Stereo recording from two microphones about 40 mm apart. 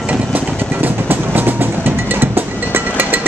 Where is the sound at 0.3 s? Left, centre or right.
Right.